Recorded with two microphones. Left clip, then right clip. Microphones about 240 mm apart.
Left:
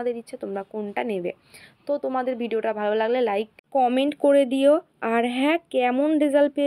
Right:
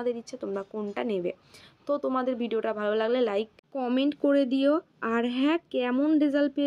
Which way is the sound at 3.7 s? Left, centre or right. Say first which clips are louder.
Left 7 dB; left.